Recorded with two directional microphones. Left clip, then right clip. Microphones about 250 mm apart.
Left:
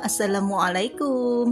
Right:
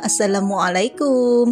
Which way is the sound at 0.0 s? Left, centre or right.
Left.